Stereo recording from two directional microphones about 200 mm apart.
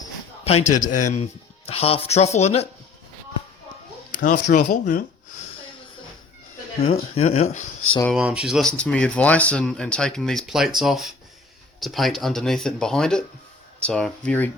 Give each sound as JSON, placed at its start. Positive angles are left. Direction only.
{"t": 0.4, "sound": "speech", "side_deg": 35}
{"t": 4.1, "sound": "speech", "side_deg": 40}
{"t": 7.2, "sound": "speech", "side_deg": 30}
{"t": 8.1, "sound": "speech", "side_deg": -5}